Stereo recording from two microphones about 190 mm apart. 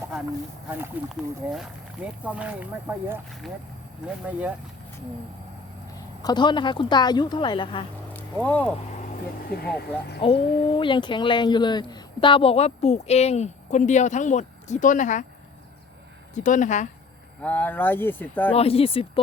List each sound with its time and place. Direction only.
0.7 s speech: 5° right (ahead or behind)
4.3 s speech: 10° right (ahead or behind)
6.2 s a woman's voice: 25° left (ahead or behind)
8.1 s a sound: 10° left (ahead or behind)
9.5 s speech: 55° left (ahead or behind)
10.2 s speech: 30° left (ahead or behind)
16.3 s speech: 40° left (ahead or behind)
17.4 s speech: 10° left (ahead or behind)
18.5 s speech: 30° left (ahead or behind)